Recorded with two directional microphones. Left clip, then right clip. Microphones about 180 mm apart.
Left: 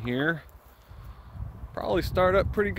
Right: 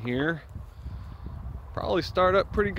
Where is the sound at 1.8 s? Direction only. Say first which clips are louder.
Even; 10° left (ahead or behind).